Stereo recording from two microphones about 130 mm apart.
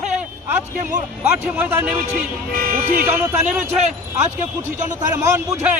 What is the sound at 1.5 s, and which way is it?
Speech, 15° right (ahead or behind).